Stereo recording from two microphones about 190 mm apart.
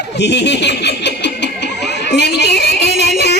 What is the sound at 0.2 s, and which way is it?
Snicker, 65° left (ahead or behind).